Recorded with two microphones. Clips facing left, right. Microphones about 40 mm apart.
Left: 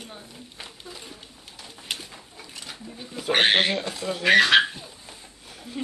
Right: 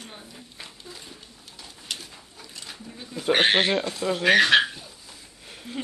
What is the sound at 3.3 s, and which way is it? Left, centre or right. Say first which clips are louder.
Speech: even; centre.